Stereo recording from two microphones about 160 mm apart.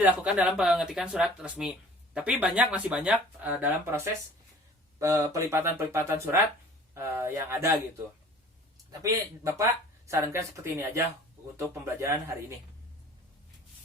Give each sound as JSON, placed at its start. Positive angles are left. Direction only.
{"t": 0.0, "sound": "speech", "side_deg": -10}
{"t": 8.9, "sound": "speech", "side_deg": -20}